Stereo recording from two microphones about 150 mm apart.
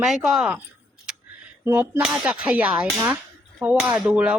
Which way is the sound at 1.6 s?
15° right (ahead or behind).